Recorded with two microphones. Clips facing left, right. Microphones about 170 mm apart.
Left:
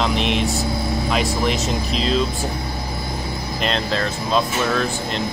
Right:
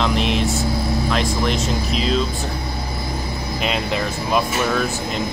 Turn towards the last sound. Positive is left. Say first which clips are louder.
# even
turn(degrees=-10)  # may be behind; listen again after turning